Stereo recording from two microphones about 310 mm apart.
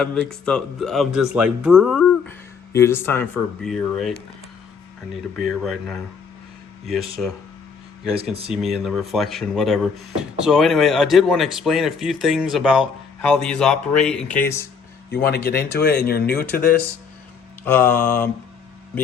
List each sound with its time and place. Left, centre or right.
0.0 s speech: centre
5.4 s speech: centre
8.4 s speech: centre
15.4 s speech: left
17.7 s speech: centre